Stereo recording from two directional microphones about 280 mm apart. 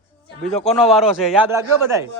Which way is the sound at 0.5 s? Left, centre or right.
Centre.